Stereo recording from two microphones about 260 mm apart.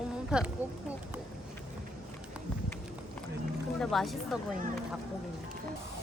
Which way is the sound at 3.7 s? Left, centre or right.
Centre.